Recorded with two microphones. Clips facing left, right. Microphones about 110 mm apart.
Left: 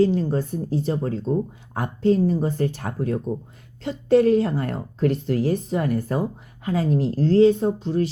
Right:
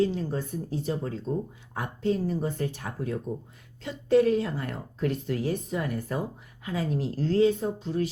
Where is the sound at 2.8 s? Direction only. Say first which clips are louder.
Left 7 dB; 50° left (ahead or behind).